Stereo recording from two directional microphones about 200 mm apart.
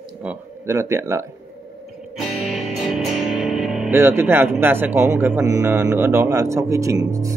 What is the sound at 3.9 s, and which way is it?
Speech, 10° right (ahead or behind).